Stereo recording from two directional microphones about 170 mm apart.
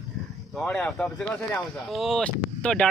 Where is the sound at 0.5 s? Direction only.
5° left (ahead or behind).